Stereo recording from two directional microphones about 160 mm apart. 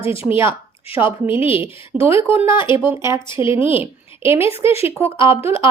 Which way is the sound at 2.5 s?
30° left (ahead or behind).